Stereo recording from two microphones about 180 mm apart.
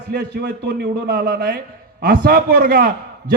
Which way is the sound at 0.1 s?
60° right (ahead or behind).